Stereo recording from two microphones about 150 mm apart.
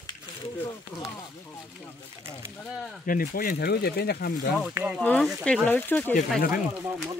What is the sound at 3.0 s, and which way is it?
Speech, 75° left (ahead or behind).